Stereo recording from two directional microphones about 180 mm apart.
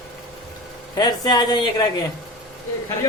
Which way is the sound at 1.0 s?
25° left (ahead or behind).